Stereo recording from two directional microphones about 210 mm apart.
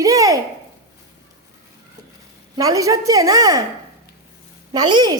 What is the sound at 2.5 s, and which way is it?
A woman's voice, 15° right (ahead or behind).